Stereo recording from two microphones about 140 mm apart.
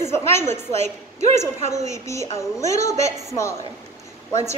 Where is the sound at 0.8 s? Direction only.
20° left (ahead or behind).